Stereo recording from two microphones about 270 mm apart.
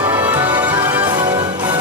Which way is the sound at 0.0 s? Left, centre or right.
Centre.